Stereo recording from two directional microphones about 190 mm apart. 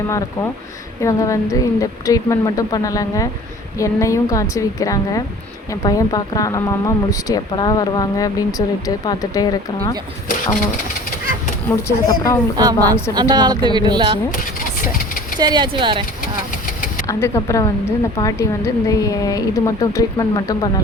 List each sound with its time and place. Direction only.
1.0 s a woman's voice: 15° left (ahead or behind)
11.8 s a woman's voice: 15° left (ahead or behind)
12.5 s a woman's voice: 20° right (ahead or behind)
15.4 s a woman's voice: 20° right (ahead or behind)
17.1 s a woman's voice: 15° left (ahead or behind)